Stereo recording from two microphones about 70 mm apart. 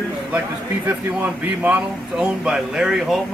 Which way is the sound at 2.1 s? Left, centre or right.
Centre.